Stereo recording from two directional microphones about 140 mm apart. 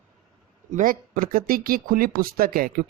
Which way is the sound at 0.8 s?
75° right (ahead or behind).